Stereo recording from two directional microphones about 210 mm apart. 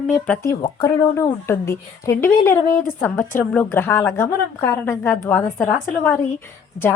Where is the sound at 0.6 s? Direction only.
20° left (ahead or behind).